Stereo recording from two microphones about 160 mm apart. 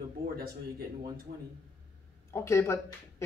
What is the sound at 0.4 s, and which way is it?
Speech, 70° right (ahead or behind).